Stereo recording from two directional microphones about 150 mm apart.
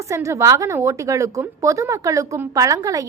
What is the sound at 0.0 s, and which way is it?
A woman's voice, 20° right (ahead or behind).